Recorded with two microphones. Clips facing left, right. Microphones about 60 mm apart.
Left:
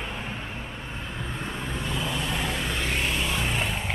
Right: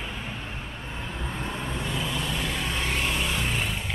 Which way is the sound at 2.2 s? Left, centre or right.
Centre.